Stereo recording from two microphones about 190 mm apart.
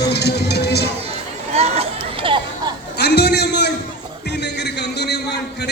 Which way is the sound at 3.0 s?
60° left (ahead or behind).